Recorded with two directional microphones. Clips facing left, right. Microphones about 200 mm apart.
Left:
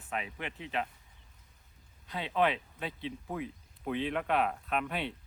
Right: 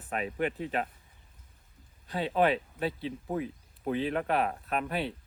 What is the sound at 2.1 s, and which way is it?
Speech, 40° right (ahead or behind).